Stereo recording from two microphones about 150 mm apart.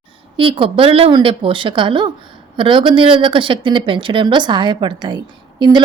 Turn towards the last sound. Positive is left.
turn(degrees=-30)  # may be behind; listen again after turning